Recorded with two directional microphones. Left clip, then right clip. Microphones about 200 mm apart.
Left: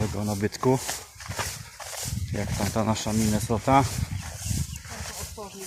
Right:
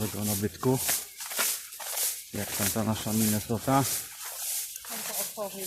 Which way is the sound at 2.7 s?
10° left (ahead or behind).